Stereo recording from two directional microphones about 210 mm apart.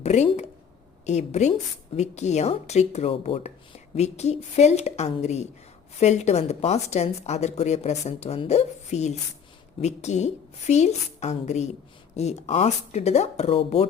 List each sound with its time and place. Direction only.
0.0 s a woman's voice: 30° left (ahead or behind)